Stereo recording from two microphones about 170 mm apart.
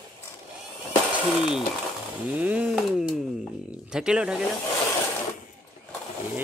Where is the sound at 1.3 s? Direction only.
5° right (ahead or behind).